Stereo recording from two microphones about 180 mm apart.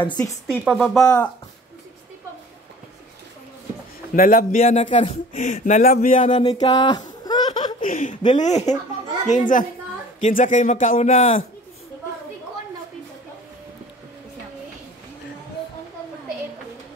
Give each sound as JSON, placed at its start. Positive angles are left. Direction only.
{"t": 0.5, "sound": "a woman's voice", "side_deg": 0}
{"t": 1.0, "sound": "speech", "side_deg": 15}
{"t": 4.1, "sound": "a child's voice", "side_deg": 50}
{"t": 6.5, "sound": "a sound", "side_deg": 30}
{"t": 7.8, "sound": "chuckle", "side_deg": 45}
{"t": 8.3, "sound": "a child's voice", "side_deg": 40}